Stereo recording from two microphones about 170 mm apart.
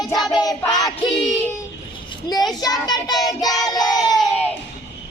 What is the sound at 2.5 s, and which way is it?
Speech, 20° left (ahead or behind).